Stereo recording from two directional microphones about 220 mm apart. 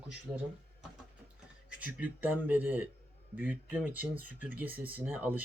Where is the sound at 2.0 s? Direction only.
10° right (ahead or behind).